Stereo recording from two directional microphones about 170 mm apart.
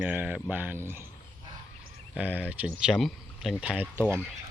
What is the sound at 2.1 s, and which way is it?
Speech, 10° right (ahead or behind).